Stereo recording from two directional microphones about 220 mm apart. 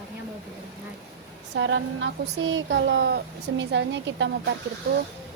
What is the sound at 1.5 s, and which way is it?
A woman's voice, 55° right (ahead or behind).